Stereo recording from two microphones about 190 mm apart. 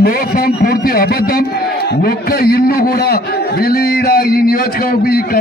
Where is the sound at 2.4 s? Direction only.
50° left (ahead or behind).